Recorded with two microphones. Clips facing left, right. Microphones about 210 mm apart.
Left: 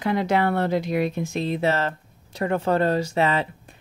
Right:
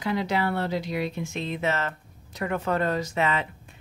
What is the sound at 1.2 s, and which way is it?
Speech, 35° left (ahead or behind).